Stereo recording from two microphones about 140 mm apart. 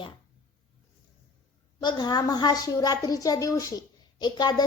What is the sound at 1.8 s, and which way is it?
A woman's voice, 30° left (ahead or behind).